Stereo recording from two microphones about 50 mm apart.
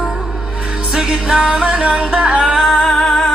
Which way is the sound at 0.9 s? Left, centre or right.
Centre.